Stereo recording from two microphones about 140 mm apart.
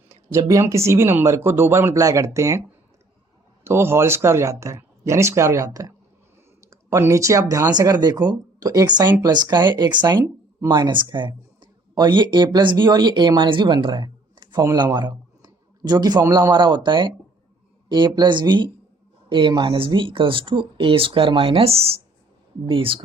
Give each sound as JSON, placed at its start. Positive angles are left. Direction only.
{"t": 0.1, "sound": "speech", "side_deg": -20}
{"t": 3.6, "sound": "speech", "side_deg": -20}